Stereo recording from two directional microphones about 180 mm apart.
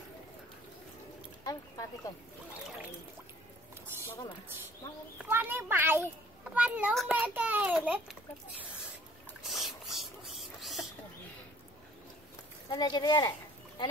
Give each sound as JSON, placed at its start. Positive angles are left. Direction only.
{"t": 1.4, "sound": "speech", "side_deg": 20}
{"t": 3.9, "sound": "music", "side_deg": -10}
{"t": 5.2, "sound": "a child's voice", "side_deg": -10}
{"t": 7.2, "sound": "a child's voice", "side_deg": -10}
{"t": 9.4, "sound": "a sound", "side_deg": 0}
{"t": 12.6, "sound": "speech", "side_deg": 25}